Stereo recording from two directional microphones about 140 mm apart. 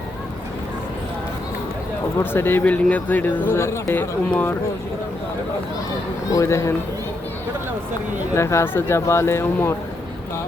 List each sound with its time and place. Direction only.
2.1 s speech: 15° left (ahead or behind)
6.3 s speech: 20° left (ahead or behind)
8.4 s speech: 20° left (ahead or behind)